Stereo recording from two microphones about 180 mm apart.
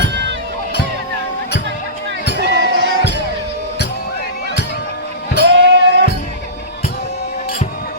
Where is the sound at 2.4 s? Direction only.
65° right (ahead or behind).